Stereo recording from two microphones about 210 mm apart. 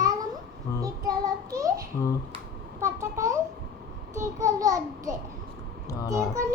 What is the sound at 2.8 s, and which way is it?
Speech, 15° right (ahead or behind).